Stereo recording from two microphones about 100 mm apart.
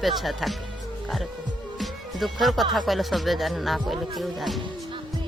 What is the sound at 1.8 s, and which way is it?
Music, centre (ahead or behind).